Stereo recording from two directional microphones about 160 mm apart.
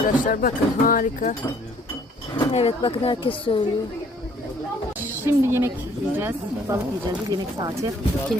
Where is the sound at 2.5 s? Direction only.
35° left (ahead or behind).